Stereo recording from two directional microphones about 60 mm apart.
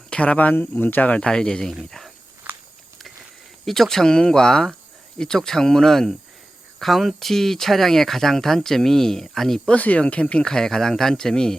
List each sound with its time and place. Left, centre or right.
0.1 s speech: left; by 2.1 s centre
3.7 s speech: centre
9.6 s speech: left